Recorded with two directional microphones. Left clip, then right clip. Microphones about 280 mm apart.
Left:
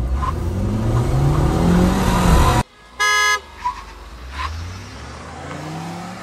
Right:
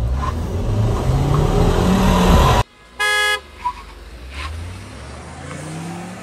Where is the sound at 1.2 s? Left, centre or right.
Right.